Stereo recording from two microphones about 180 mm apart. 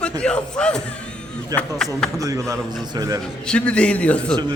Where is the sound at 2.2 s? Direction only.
20° right (ahead or behind).